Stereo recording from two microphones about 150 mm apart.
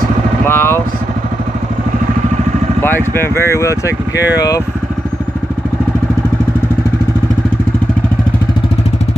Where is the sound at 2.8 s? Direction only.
15° left (ahead or behind).